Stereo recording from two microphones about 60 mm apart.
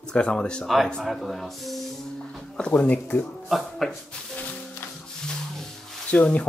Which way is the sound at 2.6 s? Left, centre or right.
Left.